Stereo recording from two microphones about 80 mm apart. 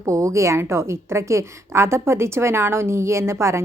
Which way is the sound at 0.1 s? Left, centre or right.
Right.